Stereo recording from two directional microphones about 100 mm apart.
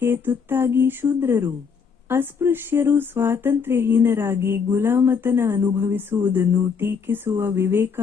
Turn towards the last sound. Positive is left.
turn(degrees=-25)  # may be behind; listen again after turning